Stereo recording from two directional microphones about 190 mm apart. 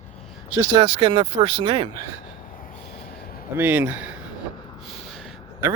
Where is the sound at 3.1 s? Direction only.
50° left (ahead or behind).